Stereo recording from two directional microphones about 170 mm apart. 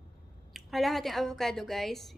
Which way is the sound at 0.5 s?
Centre (ahead or behind).